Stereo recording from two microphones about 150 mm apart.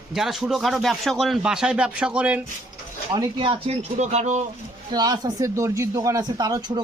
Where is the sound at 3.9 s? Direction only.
50° right (ahead or behind).